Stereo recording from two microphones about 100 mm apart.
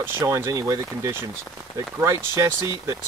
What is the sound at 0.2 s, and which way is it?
Speech, 35° right (ahead or behind).